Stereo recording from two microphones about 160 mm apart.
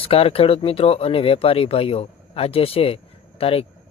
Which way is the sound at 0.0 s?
35° left (ahead or behind).